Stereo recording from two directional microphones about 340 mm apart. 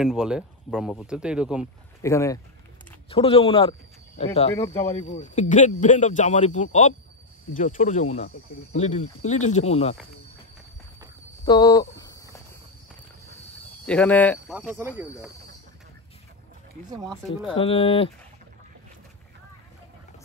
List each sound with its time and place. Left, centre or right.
0.0 s speech: centre
2.0 s speech: centre
11.4 s a sound: centre
13.8 s speech: centre
17.5 s speech: centre